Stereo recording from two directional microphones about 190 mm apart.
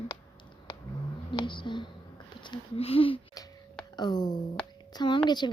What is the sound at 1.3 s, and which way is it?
A woman's voice, 25° left (ahead or behind).